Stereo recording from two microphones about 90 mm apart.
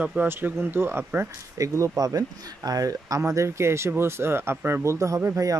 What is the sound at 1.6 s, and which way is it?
Speech, 35° right (ahead or behind).